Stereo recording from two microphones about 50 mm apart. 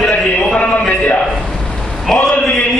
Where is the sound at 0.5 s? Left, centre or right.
Left.